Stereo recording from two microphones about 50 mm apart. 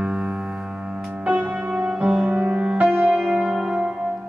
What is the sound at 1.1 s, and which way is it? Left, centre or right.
Music, right.